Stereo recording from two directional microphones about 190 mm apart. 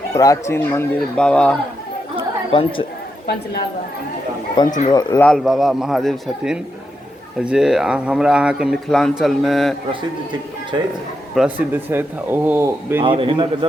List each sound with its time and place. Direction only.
0.1 s speech: 20° left (ahead or behind)
2.1 s chatter: 25° left (ahead or behind)
4.9 s speech: 20° left (ahead or behind)
5.2 s speech: centre (ahead or behind)
11.3 s speech: 10° right (ahead or behind)
13.0 s a man's voice: 25° right (ahead or behind)